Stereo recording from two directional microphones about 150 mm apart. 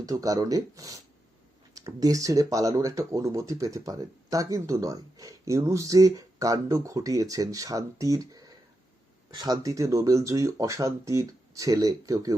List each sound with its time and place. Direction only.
0.0 s speech: 25° right (ahead or behind)